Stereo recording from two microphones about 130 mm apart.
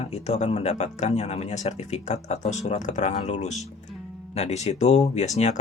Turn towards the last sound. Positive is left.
turn(degrees=60)  # may be behind; listen again after turning